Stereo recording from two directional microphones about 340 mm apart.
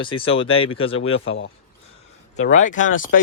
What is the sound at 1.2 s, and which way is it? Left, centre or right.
Speech, left.